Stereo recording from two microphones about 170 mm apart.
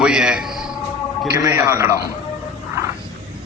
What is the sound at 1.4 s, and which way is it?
Speech, 15° right (ahead or behind).